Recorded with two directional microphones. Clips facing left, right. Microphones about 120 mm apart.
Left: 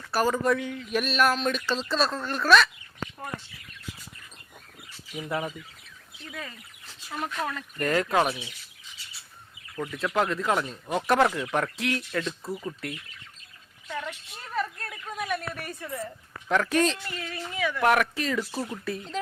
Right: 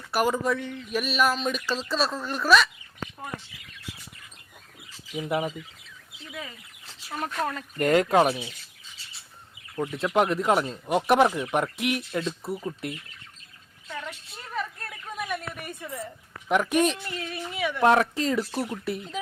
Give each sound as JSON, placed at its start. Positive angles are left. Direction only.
{"t": 0.1, "sound": "speech", "side_deg": -15}
{"t": 0.4, "sound": "speech", "side_deg": 0}
{"t": 5.1, "sound": "speech", "side_deg": -15}
{"t": 7.4, "sound": "speech", "side_deg": -30}
{"t": 9.7, "sound": "speech", "side_deg": -25}
{"t": 13.8, "sound": "a woman's voice", "side_deg": 5}
{"t": 14.6, "sound": "a sound", "side_deg": 0}
{"t": 16.5, "sound": "speech", "side_deg": -15}